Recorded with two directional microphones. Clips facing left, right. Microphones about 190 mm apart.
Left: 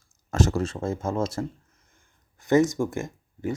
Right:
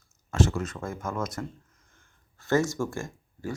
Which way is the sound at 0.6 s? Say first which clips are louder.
Left 6 dB; 25° left (ahead or behind).